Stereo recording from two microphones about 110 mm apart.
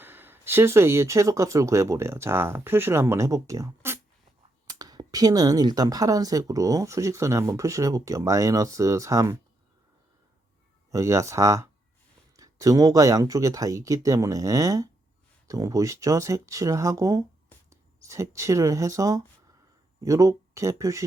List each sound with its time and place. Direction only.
0.0 s speech: 20° right (ahead or behind)
10.9 s speech: 30° right (ahead or behind)